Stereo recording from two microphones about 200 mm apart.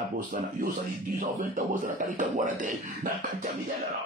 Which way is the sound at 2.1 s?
40° right (ahead or behind).